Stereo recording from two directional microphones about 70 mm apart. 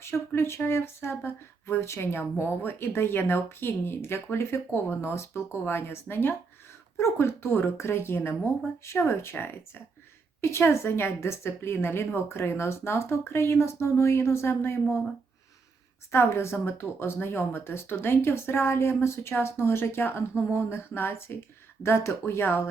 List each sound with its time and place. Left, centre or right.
0.0 s speech: left
16.1 s speech: left